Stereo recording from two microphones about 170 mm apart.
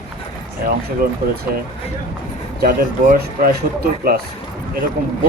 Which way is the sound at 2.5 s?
60° right (ahead or behind).